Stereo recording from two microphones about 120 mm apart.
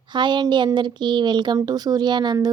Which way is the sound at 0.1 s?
40° right (ahead or behind).